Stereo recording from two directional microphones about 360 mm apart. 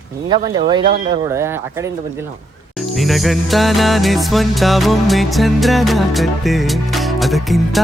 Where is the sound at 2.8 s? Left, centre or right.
Centre.